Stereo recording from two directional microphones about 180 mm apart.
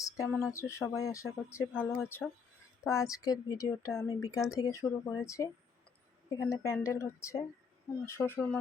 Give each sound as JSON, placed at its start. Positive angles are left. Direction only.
{"t": 0.5, "sound": "speech", "side_deg": 15}